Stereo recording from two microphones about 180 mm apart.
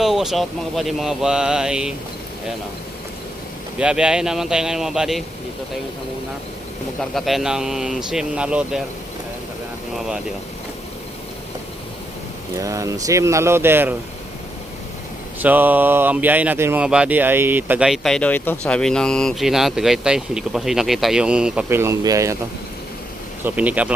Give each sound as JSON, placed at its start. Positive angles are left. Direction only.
{"t": 0.0, "sound": "speech", "side_deg": 0}
{"t": 3.8, "sound": "speech", "side_deg": -5}
{"t": 7.0, "sound": "speech", "side_deg": 0}
{"t": 12.6, "sound": "speech", "side_deg": -15}
{"t": 15.4, "sound": "speech", "side_deg": -10}
{"t": 23.4, "sound": "speech", "side_deg": -10}